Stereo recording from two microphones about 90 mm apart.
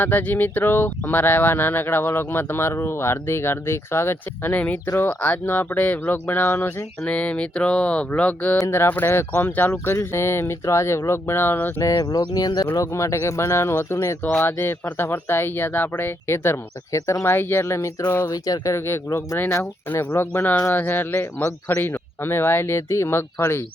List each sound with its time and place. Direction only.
0.0 s speech: 20° left (ahead or behind)
8.6 s speech: 30° left (ahead or behind)
11.8 s speech: 45° left (ahead or behind)
12.7 s speech: 35° left (ahead or behind)
18.3 s speech: 45° left (ahead or behind)
18.9 s speech: 30° left (ahead or behind)